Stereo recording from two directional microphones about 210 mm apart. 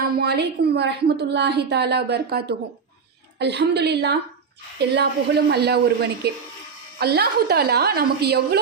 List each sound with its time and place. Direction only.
0.0 s a woman's voice: 50° right (ahead or behind)